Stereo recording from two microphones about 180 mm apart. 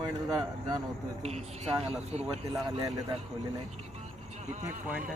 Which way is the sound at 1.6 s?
35° right (ahead or behind).